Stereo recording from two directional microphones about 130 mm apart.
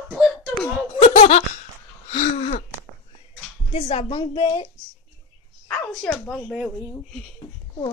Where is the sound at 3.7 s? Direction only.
50° left (ahead or behind).